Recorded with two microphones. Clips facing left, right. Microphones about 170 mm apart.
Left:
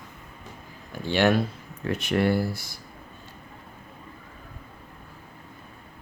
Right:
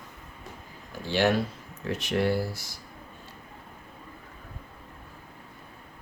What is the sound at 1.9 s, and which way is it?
Speech, 60° left (ahead or behind).